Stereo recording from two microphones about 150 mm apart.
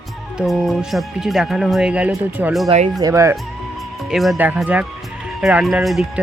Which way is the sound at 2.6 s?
45° right (ahead or behind).